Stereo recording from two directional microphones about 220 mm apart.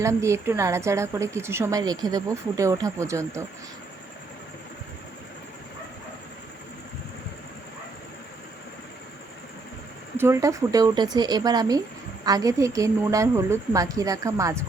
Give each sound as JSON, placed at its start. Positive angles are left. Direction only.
{"t": 0.0, "sound": "a woman's voice", "side_deg": -15}
{"t": 10.2, "sound": "a woman's voice", "side_deg": -15}